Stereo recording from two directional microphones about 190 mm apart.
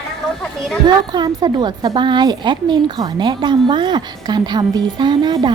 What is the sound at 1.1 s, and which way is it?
Speech, 20° right (ahead or behind).